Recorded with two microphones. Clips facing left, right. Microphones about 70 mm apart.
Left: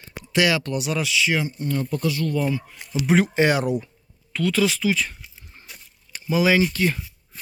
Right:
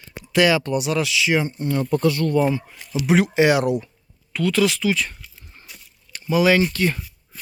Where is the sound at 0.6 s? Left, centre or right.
Centre.